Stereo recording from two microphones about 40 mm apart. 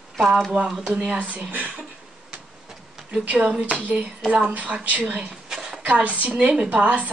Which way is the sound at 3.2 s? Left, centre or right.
Right.